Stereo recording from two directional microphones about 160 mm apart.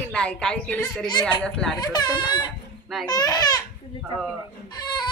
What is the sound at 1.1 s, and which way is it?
Speech, 25° left (ahead or behind).